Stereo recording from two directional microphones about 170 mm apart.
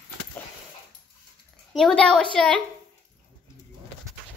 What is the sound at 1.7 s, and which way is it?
Speech, 5° left (ahead or behind).